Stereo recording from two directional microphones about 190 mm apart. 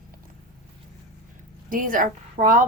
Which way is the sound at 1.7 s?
45° right (ahead or behind).